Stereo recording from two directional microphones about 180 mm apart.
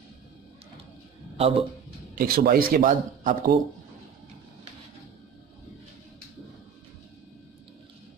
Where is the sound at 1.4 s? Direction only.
35° right (ahead or behind).